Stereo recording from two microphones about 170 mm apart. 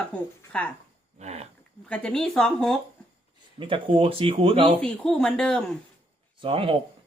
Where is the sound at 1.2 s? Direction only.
40° right (ahead or behind).